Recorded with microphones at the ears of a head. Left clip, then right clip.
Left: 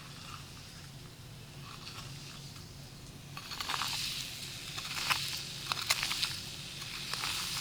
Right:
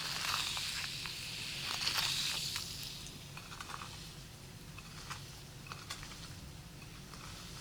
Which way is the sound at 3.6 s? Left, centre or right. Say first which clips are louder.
Left 12 dB; left.